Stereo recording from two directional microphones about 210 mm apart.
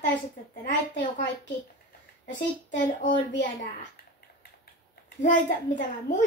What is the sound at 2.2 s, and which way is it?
Speech, 55° left (ahead or behind).